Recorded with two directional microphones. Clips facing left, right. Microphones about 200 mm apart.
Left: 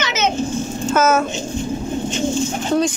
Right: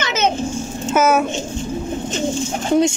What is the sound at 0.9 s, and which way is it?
Speech, 15° right (ahead or behind).